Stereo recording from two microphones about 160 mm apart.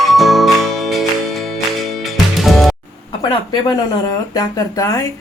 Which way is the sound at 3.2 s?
25° left (ahead or behind).